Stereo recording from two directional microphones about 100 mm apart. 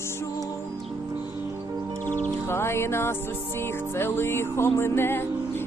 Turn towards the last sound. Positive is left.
turn(degrees=25)  # may be behind; listen again after turning